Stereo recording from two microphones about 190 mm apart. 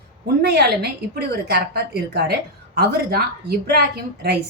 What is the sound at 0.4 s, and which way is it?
A woman's voice, 60° right (ahead or behind).